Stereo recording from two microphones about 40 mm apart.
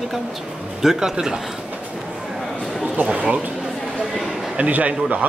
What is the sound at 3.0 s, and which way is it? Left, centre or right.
Speech, right.